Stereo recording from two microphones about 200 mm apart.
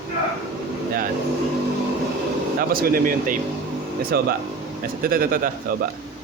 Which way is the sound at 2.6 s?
45° right (ahead or behind).